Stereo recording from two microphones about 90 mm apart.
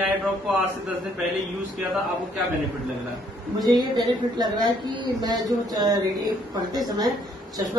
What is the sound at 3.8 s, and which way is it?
Speech, 55° right (ahead or behind).